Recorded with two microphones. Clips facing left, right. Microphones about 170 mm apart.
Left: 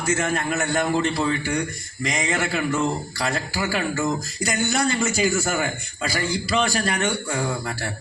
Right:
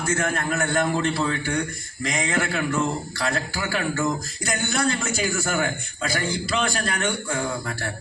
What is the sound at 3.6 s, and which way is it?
Speech, 55° right (ahead or behind).